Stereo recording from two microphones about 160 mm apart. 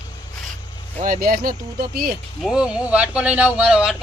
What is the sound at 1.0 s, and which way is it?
Speech, 60° right (ahead or behind).